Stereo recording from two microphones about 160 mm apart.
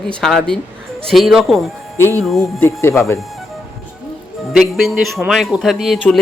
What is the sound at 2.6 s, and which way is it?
Speech, 15° left (ahead or behind).